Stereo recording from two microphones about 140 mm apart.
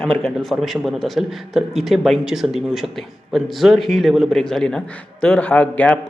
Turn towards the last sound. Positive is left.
turn(degrees=10)  # may be behind; listen again after turning